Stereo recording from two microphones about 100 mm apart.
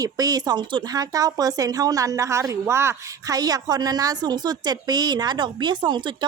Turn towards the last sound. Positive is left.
turn(degrees=-50)  # may be behind; listen again after turning